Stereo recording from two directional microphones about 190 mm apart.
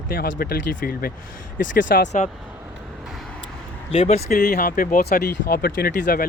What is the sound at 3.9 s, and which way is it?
Speech, 30° left (ahead or behind).